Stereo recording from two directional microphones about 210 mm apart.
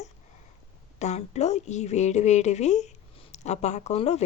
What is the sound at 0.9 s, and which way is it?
Speech, 35° left (ahead or behind).